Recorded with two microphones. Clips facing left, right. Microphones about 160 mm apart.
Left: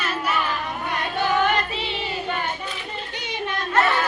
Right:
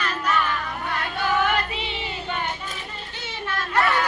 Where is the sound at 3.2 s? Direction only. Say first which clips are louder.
Left 1 dB; 15° left (ahead or behind).